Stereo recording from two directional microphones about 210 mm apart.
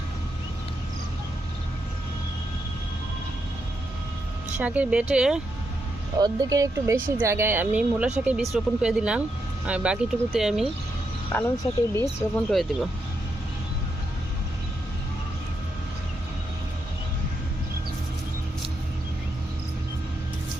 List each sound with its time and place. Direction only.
4.6 s speech: 5° right (ahead or behind)
6.1 s speech: 20° right (ahead or behind); by 10.6 s centre (ahead or behind)
11.3 s speech: 10° left (ahead or behind)